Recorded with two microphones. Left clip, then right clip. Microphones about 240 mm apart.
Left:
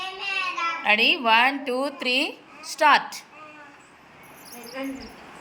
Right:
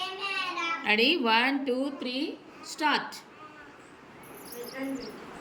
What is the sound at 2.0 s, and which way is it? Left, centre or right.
Speech, left.